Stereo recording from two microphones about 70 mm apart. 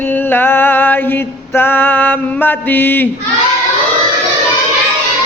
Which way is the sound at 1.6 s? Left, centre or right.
Left.